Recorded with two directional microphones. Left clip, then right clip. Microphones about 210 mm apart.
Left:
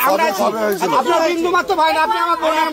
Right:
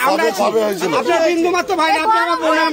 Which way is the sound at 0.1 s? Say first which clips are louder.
Right 1 dB; 40° right (ahead or behind).